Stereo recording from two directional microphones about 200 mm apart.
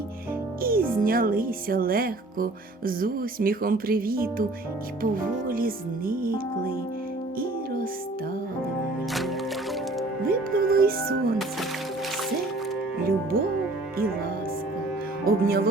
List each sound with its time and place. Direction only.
0.6 s speech: 45° right (ahead or behind)
10.2 s music: 50° right (ahead or behind)
13.0 s speech: 50° right (ahead or behind)
15.2 s speech: 45° right (ahead or behind)